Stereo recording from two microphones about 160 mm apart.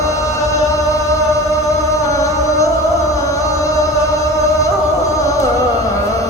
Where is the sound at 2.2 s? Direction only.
20° left (ahead or behind).